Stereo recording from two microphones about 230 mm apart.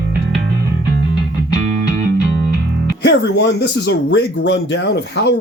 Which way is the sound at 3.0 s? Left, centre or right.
Left.